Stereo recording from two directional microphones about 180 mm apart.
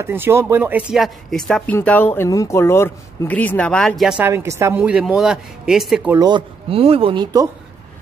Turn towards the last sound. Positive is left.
turn(degrees=-30)  # may be behind; listen again after turning